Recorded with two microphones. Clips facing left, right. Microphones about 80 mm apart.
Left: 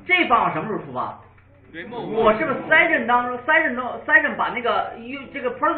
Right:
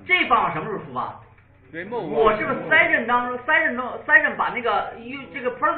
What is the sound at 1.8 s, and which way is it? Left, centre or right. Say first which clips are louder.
Speech: right 2 dB; right.